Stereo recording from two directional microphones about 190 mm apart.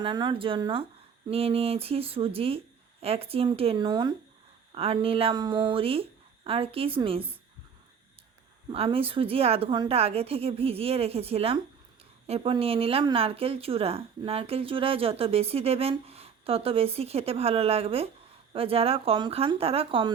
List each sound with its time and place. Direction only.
0.0 s a woman's voice: 25° right (ahead or behind)
8.7 s a woman's voice: 30° right (ahead or behind)